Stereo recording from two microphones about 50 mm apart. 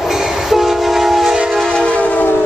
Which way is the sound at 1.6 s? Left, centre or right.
Centre.